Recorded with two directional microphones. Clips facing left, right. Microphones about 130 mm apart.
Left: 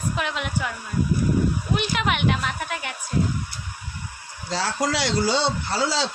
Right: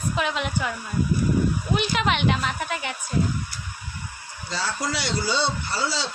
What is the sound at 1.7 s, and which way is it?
A woman's voice, centre (ahead or behind).